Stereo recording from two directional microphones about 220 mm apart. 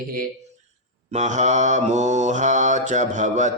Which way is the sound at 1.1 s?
30° right (ahead or behind).